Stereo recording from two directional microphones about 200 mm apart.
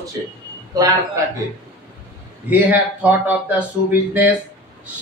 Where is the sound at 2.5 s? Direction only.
10° right (ahead or behind).